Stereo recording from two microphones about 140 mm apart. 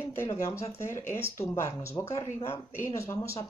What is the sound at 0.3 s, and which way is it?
Speech, 20° left (ahead or behind).